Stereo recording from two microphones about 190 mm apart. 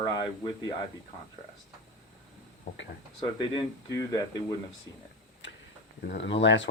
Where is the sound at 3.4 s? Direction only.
25° left (ahead or behind).